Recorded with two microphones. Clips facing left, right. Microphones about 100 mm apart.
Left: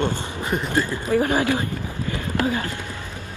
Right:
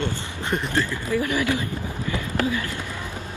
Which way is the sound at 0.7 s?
20° left (ahead or behind).